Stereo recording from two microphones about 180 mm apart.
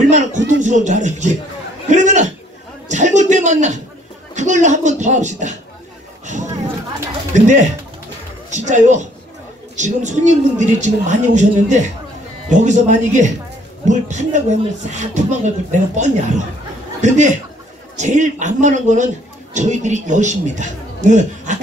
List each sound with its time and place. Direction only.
0.1 s speech: 40° right (ahead or behind)
1.9 s a sound: 40° right (ahead or behind)
4.4 s speech: 40° right (ahead or behind)
7.3 s speech: 40° right (ahead or behind)